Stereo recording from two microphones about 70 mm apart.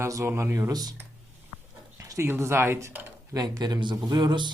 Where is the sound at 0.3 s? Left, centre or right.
Right.